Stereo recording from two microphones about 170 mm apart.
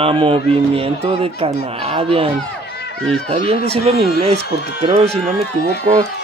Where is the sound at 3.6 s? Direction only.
35° right (ahead or behind).